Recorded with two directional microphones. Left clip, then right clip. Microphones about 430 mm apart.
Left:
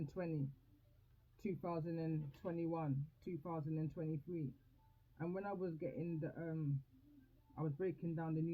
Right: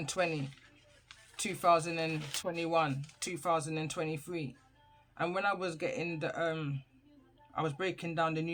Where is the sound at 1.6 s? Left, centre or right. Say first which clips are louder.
Right 18 dB; centre.